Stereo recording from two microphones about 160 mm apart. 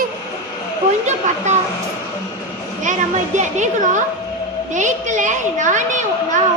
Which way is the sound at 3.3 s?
50° right (ahead or behind).